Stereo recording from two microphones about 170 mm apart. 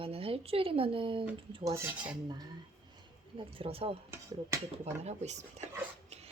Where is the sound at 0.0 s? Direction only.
35° right (ahead or behind).